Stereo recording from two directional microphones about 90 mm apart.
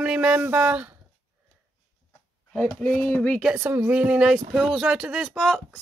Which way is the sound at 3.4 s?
10° right (ahead or behind).